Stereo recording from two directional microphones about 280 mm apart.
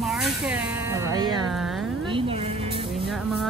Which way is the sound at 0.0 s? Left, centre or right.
Centre.